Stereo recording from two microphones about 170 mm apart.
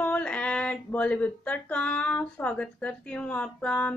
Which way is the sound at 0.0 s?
10° left (ahead or behind).